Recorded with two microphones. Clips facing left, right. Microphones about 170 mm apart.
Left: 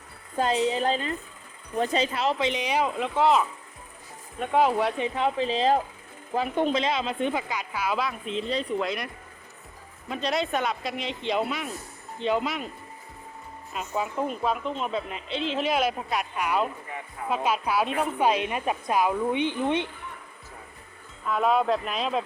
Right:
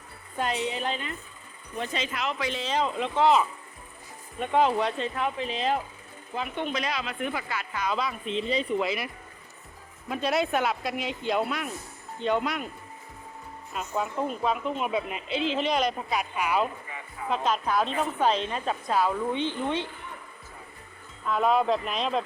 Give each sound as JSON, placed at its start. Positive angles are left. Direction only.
{"t": 0.3, "sound": "a woman's voice", "side_deg": 30}
{"t": 2.4, "sound": "a woman's voice", "side_deg": 15}
{"t": 5.2, "sound": "a woman's voice", "side_deg": 30}
{"t": 6.7, "sound": "speech", "side_deg": 25}
{"t": 7.4, "sound": "a woman's voice", "side_deg": 15}
{"t": 10.1, "sound": "a woman's voice", "side_deg": -5}
{"t": 13.7, "sound": "a woman's voice", "side_deg": 0}
{"t": 21.2, "sound": "a woman's voice", "side_deg": 0}